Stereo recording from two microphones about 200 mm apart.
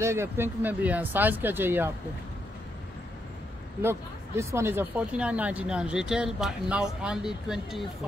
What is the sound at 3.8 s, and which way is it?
Speech, 15° right (ahead or behind).